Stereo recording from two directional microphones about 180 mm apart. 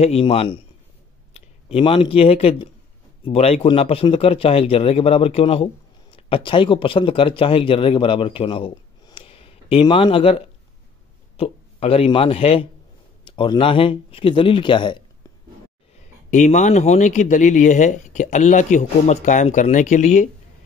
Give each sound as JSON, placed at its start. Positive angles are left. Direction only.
{"t": 0.0, "sound": "a man's voice", "side_deg": 35}
{"t": 16.3, "sound": "a man's voice", "side_deg": 40}